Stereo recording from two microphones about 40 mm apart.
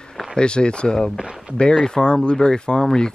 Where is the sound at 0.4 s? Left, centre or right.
Left.